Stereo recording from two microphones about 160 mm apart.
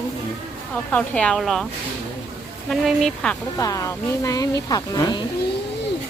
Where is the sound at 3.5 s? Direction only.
20° left (ahead or behind).